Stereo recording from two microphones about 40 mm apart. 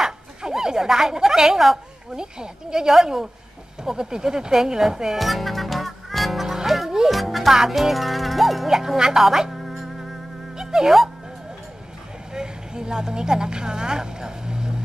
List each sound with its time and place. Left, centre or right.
0.0 s a sound: centre
2.1 s speech: centre
5.2 s music: centre
10.5 s music: centre
12.4 s a woman's voice: centre